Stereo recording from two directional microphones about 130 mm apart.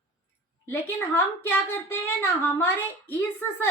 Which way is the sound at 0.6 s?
20° left (ahead or behind).